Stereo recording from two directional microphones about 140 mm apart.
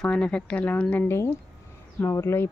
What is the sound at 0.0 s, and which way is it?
Speech, 5° left (ahead or behind).